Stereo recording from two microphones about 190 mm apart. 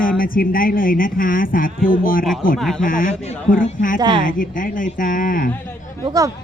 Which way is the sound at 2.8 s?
45° left (ahead or behind).